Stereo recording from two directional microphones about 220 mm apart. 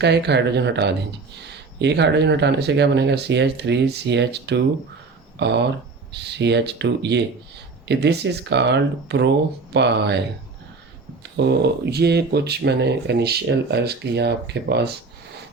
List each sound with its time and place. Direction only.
0.0 s speech: 50° right (ahead or behind)